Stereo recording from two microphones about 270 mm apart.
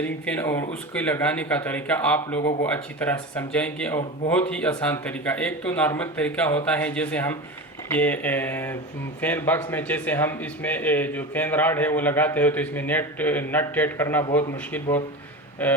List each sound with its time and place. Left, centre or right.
0.0 s a man's voice: centre